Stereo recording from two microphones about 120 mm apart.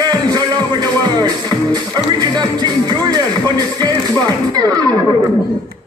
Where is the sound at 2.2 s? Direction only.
35° right (ahead or behind).